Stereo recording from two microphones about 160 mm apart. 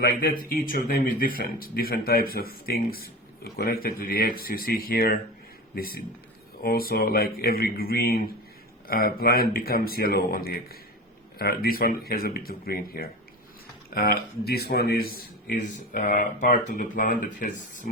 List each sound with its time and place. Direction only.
0.0 s speech: 65° left (ahead or behind)